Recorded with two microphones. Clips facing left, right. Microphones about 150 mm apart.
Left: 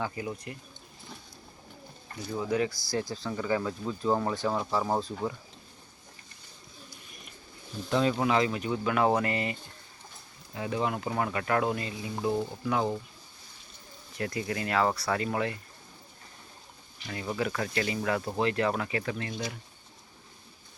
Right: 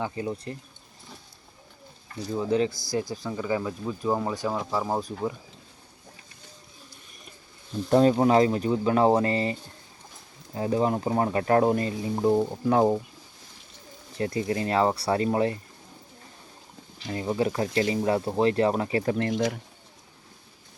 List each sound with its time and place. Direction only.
0.0 s speech: 30° right (ahead or behind)
2.3 s speech: 20° right (ahead or behind)
7.9 s speech: 40° right (ahead or behind)
14.2 s speech: 30° right (ahead or behind)
17.1 s speech: 25° right (ahead or behind)